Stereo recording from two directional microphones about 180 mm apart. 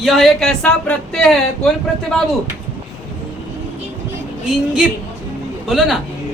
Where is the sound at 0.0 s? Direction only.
Centre (ahead or behind).